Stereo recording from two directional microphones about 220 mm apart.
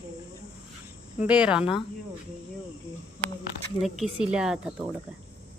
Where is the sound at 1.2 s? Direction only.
5° right (ahead or behind).